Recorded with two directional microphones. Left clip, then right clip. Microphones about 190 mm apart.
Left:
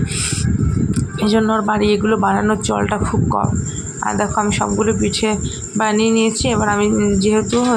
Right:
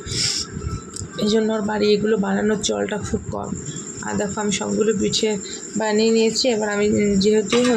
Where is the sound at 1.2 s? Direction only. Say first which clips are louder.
Left 3 dB; 20° left (ahead or behind).